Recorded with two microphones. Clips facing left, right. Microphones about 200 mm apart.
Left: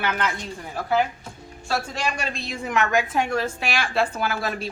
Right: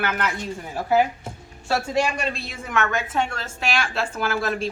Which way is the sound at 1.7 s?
10° right (ahead or behind).